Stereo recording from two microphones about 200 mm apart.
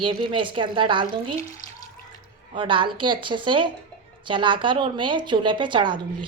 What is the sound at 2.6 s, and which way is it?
A woman's voice, 25° right (ahead or behind).